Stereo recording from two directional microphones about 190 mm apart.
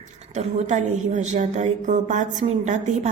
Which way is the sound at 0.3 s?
40° right (ahead or behind).